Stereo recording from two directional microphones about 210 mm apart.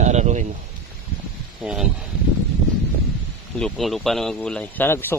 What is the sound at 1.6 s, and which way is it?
Speech, centre (ahead or behind).